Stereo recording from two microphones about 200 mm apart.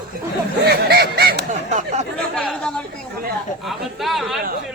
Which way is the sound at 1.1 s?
55° right (ahead or behind).